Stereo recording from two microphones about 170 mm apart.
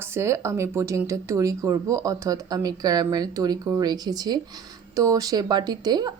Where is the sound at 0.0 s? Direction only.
15° right (ahead or behind).